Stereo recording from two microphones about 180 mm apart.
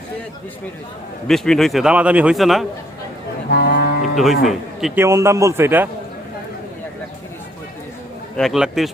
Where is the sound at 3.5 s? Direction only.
65° left (ahead or behind).